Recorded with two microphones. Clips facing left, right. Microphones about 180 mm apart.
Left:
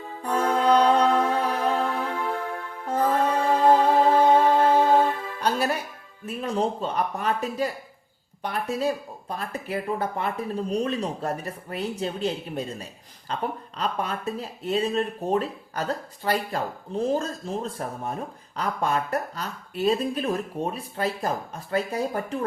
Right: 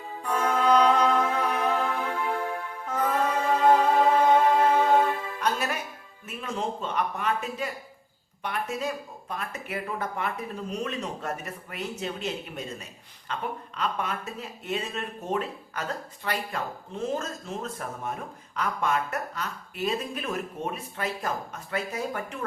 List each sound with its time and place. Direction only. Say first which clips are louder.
0.2 s music: left 3 dB; 30° left (ahead or behind)
2.8 s music: left 4 dB; 30° left (ahead or behind)
6.2 s speech: left 6 dB; 35° left (ahead or behind)